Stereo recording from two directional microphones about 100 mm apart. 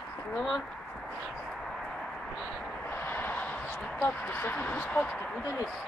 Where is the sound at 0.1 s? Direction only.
15° left (ahead or behind).